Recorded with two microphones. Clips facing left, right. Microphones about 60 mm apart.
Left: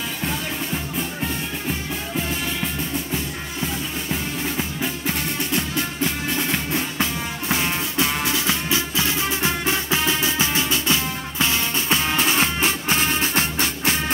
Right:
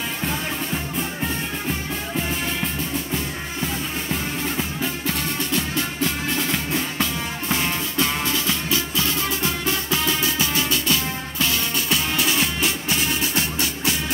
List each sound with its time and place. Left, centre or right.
4.1 s music: centre
5.5 s music: left